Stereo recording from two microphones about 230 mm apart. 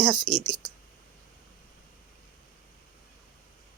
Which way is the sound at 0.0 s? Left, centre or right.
Centre.